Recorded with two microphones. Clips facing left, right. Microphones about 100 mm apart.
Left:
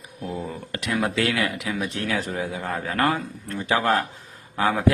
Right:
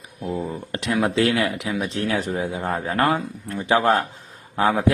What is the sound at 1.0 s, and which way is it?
A man's voice, 25° right (ahead or behind).